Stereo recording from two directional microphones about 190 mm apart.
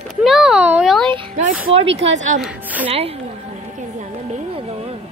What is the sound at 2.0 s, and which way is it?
Speech, 35° right (ahead or behind).